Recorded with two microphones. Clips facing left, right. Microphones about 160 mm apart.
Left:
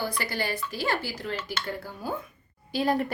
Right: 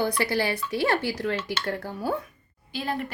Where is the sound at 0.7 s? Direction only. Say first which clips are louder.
Right 5 dB; 70° right (ahead or behind).